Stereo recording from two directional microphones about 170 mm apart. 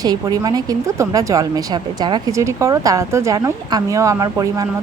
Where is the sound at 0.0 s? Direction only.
20° right (ahead or behind).